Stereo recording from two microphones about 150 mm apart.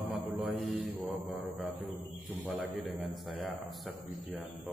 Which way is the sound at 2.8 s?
Centre (ahead or behind).